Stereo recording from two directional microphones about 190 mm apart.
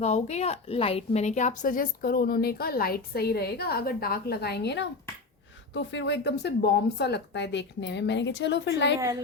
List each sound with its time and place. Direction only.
0.0 s a woman's voice: 35° left (ahead or behind); by 9.0 s 65° left (ahead or behind)